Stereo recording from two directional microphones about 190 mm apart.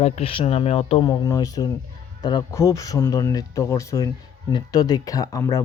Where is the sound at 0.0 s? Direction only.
30° left (ahead or behind).